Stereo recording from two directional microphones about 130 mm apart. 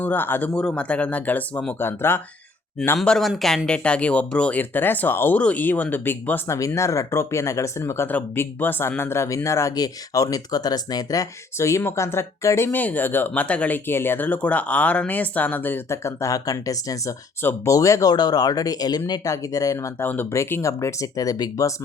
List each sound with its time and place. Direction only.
0.0 s speech: 15° left (ahead or behind)
3.0 s speech: 5° left (ahead or behind); by 21.7 s 30° left (ahead or behind)